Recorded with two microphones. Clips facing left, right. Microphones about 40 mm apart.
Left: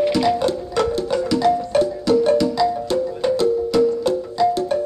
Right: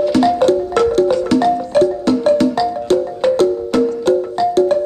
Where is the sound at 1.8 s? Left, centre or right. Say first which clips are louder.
Right 3 dB; right.